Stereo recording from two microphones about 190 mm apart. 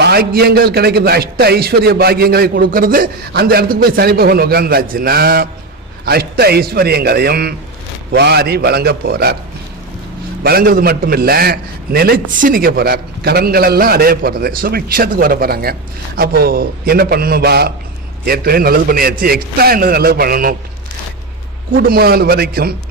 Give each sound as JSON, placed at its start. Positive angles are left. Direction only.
{"t": 0.0, "sound": "a man's voice", "side_deg": -55}
{"t": 10.4, "sound": "a man's voice", "side_deg": -55}
{"t": 21.8, "sound": "a man's voice", "side_deg": -50}